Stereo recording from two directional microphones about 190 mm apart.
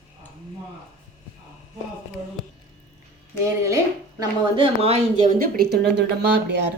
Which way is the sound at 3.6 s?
15° right (ahead or behind).